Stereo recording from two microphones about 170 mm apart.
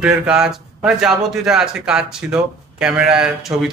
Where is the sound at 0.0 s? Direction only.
5° right (ahead or behind).